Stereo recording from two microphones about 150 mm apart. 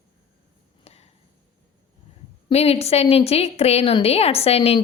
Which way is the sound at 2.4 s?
45° left (ahead or behind).